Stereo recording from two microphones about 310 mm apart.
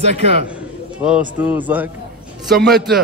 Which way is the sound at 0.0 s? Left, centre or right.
Right.